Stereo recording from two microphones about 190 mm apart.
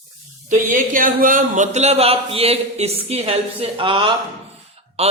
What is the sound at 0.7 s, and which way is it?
A man's voice, 45° right (ahead or behind).